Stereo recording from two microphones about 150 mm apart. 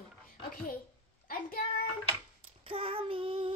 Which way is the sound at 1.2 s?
75° left (ahead or behind).